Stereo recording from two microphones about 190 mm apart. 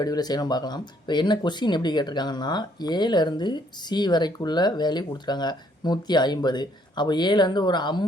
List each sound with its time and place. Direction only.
0.0 s speech: 20° left (ahead or behind)